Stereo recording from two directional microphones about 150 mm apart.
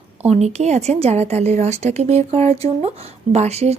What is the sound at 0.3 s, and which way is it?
Speech, 45° right (ahead or behind).